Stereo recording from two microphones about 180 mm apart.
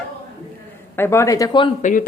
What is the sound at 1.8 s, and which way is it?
Speech, 45° left (ahead or behind).